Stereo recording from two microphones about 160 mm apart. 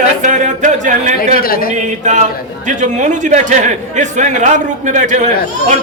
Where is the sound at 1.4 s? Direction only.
65° left (ahead or behind).